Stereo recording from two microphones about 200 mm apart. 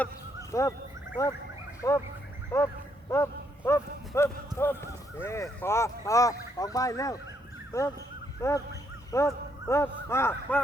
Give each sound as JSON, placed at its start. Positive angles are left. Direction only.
{"t": 0.5, "sound": "speech", "side_deg": 15}